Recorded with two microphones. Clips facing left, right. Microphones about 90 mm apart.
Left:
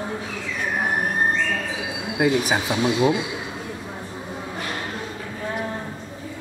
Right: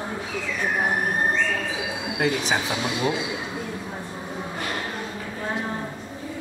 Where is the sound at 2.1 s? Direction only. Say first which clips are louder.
Left 4 dB; 5° left (ahead or behind).